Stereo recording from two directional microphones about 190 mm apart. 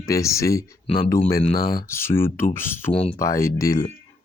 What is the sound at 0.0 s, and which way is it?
Speech, 15° left (ahead or behind).